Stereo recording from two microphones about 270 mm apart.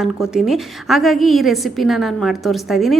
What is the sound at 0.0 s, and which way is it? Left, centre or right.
A woman's voice, centre.